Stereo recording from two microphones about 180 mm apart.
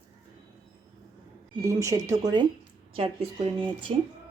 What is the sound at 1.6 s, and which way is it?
Speech, 15° right (ahead or behind).